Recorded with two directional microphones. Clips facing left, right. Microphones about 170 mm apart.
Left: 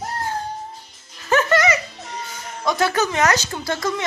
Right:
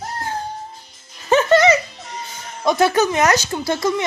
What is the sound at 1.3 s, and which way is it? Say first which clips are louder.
Music: right 5 dB; 25° right (ahead or behind).